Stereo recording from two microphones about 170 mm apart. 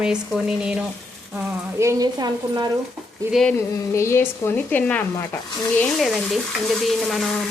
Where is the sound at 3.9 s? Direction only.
15° left (ahead or behind).